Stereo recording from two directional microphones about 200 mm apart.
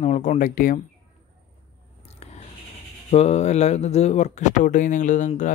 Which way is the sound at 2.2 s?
30° left (ahead or behind).